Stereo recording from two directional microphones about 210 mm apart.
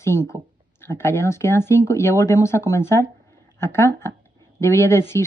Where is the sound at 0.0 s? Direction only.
10° left (ahead or behind).